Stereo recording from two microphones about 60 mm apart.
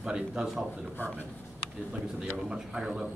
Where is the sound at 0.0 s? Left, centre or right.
Centre.